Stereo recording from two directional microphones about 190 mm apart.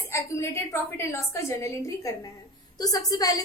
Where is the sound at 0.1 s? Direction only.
15° left (ahead or behind).